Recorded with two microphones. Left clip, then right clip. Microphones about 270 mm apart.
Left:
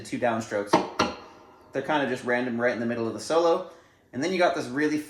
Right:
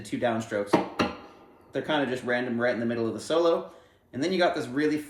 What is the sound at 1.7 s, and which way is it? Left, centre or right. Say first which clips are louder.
Speech: left 1 dB; centre.